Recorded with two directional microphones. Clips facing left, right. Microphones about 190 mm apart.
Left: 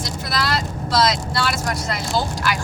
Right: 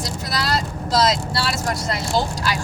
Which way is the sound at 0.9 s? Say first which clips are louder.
Right 1 dB; 30° right (ahead or behind).